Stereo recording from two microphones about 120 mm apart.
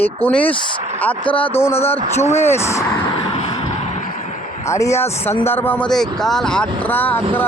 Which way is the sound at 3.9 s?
80° left.